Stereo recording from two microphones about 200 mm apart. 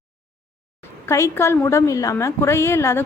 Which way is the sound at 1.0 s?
15° left (ahead or behind).